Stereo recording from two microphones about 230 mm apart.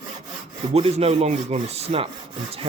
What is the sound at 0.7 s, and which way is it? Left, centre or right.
Speech, right.